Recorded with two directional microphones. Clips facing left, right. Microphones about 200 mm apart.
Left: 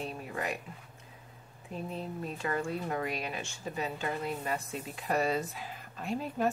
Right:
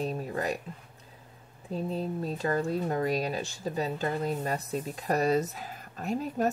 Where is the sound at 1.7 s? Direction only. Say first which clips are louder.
Right 6 dB; 35° right (ahead or behind).